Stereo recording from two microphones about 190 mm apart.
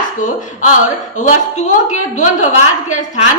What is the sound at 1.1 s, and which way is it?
A woman's voice, 40° left (ahead or behind).